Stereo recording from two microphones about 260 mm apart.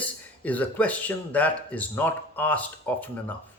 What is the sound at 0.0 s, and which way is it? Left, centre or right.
Speech, centre.